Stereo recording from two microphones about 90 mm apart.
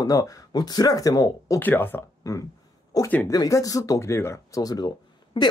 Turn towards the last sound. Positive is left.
turn(degrees=60)  # may be behind; listen again after turning